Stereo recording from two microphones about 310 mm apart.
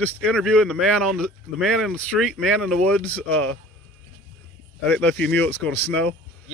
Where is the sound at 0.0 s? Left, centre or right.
Centre.